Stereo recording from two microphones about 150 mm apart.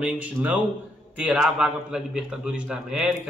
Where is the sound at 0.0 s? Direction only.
10° right (ahead or behind).